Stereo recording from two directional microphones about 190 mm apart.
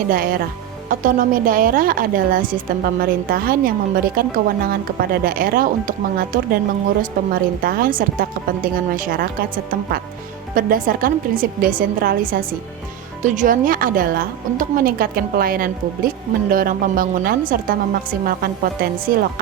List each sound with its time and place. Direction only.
0.1 s a woman's voice: 50° right (ahead or behind)
10.5 s a woman's voice: 45° right (ahead or behind)